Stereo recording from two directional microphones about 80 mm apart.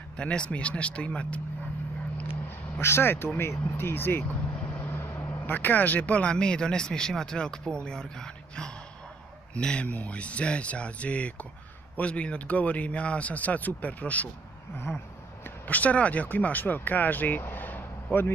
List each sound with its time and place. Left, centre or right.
0.2 s speech: centre
2.8 s speech: left
14.9 s a sound: left
15.4 s speech: left